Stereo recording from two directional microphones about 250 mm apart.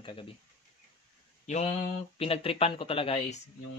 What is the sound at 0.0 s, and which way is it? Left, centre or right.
Speech, left.